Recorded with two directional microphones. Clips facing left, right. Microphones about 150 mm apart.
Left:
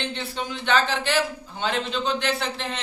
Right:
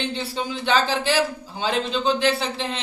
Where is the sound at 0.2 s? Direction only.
35° right (ahead or behind).